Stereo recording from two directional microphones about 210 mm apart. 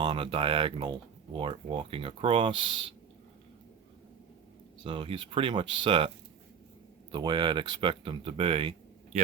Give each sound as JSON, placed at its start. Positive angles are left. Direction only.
{"t": 0.0, "sound": "speech", "side_deg": -25}
{"t": 4.8, "sound": "speech", "side_deg": -25}
{"t": 7.1, "sound": "speech", "side_deg": -20}